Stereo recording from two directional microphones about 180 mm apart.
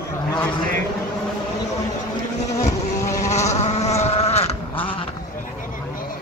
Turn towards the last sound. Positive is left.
turn(degrees=35)  # may be behind; listen again after turning